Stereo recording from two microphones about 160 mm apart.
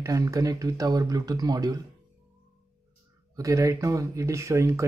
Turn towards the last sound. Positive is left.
turn(degrees=-15)  # may be behind; listen again after turning